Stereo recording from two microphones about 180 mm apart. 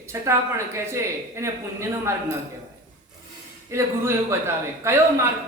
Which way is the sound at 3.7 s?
15° right (ahead or behind).